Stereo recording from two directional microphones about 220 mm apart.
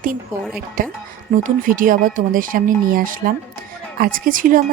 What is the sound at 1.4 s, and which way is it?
Speech, 40° right (ahead or behind).